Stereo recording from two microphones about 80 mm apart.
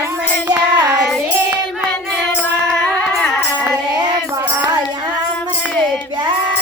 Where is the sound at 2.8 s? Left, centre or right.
Centre.